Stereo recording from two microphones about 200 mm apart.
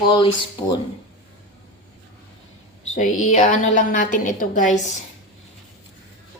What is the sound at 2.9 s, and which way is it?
A woman's voice, 40° left (ahead or behind).